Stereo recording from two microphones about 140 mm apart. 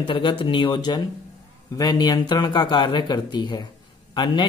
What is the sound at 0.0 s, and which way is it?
Speech, 35° left (ahead or behind).